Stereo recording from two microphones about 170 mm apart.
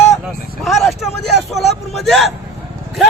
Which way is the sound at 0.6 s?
Centre (ahead or behind).